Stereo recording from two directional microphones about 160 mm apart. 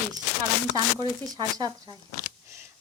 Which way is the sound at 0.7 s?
25° right (ahead or behind).